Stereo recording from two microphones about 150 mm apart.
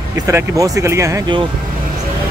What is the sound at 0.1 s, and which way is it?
Speech, 20° right (ahead or behind).